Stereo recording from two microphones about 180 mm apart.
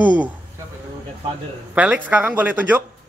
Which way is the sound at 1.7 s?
10° right (ahead or behind).